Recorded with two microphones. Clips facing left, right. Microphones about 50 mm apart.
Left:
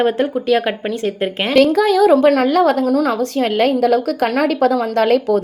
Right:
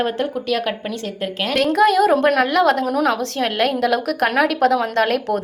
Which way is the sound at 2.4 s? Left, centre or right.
Right.